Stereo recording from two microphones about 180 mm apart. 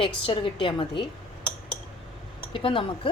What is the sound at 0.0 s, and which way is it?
Speech, 30° left (ahead or behind).